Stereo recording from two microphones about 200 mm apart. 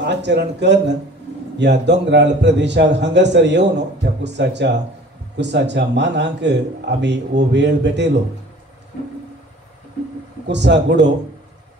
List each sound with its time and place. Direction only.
0.0 s a man's voice: 60° right (ahead or behind)
10.4 s a man's voice: 60° right (ahead or behind)